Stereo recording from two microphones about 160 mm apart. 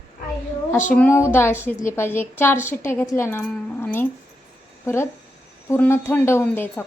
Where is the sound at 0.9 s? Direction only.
10° left (ahead or behind).